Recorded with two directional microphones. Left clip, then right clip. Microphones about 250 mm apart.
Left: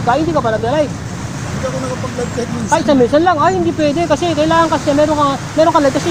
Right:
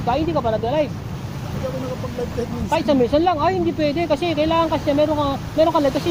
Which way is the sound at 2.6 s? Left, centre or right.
Centre.